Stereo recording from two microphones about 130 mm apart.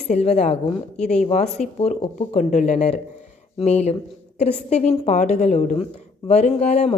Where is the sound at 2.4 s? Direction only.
70° left (ahead or behind); by 7.0 s 55° left (ahead or behind).